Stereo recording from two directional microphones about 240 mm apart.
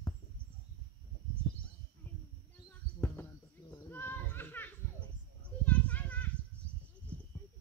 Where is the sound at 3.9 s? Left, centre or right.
Centre.